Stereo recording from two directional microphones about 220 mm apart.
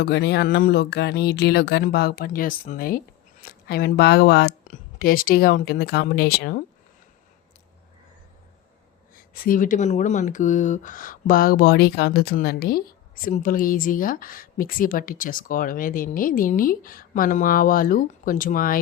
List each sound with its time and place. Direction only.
0.0 s speech: 50° left (ahead or behind)
9.1 s speech: 40° left (ahead or behind)